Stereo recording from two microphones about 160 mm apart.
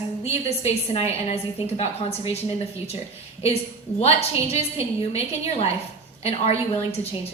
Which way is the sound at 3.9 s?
40° left (ahead or behind).